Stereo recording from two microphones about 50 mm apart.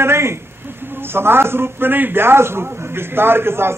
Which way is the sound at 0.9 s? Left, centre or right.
Right.